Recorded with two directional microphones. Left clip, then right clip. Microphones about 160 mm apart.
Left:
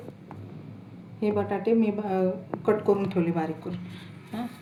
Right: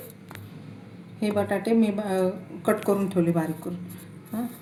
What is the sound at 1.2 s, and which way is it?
A woman's voice, 60° right (ahead or behind).